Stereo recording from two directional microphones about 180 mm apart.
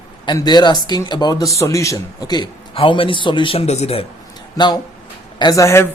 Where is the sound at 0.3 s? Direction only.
25° left (ahead or behind).